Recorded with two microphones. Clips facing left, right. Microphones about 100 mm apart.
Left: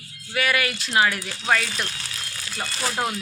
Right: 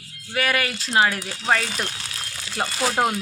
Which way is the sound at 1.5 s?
30° right (ahead or behind).